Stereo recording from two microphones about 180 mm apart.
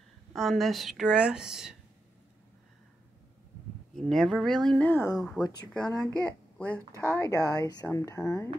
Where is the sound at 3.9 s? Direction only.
5° left (ahead or behind).